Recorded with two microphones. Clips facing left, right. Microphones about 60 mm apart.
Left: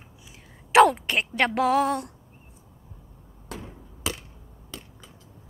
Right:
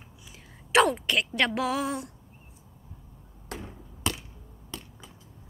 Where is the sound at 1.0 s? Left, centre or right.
Left.